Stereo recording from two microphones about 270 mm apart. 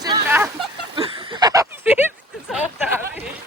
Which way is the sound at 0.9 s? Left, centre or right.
Centre.